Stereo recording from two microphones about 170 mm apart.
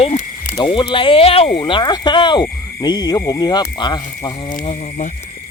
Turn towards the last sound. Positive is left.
turn(degrees=45)  # may be behind; listen again after turning